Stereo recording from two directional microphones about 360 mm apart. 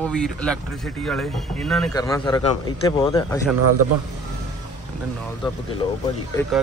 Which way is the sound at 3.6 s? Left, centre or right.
Right.